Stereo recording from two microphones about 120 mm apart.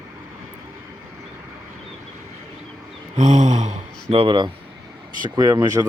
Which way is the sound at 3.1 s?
90° right.